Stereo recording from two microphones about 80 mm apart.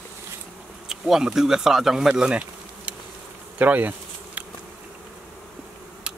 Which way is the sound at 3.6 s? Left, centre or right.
Right.